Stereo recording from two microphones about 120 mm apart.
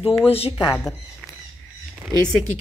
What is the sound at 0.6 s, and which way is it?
Speech, 20° left (ahead or behind).